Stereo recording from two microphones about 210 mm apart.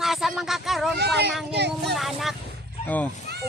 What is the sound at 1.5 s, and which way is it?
Speech, 50° right (ahead or behind).